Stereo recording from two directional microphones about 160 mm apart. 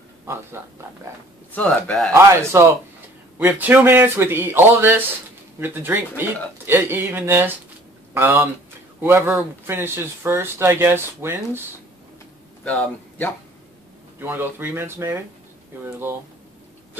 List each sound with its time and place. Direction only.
0.3 s speech: 15° right (ahead or behind)
1.5 s speech: 5° left (ahead or behind)
2.1 s a man's voice: 15° right (ahead or behind)
12.6 s speech: 5° left (ahead or behind)
14.2 s speech: 15° right (ahead or behind)